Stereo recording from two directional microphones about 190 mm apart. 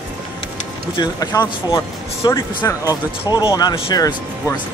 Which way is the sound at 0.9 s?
20° left (ahead or behind).